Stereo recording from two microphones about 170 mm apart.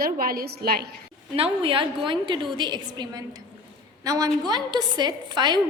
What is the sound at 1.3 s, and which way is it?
A woman's voice, 30° right (ahead or behind).